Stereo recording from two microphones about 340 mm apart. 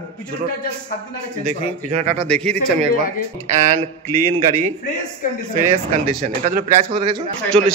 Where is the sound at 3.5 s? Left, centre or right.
Right.